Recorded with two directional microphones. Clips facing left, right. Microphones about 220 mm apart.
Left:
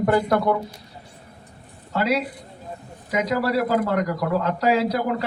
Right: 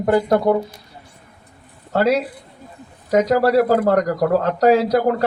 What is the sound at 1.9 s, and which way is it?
A man's voice, 50° right (ahead or behind).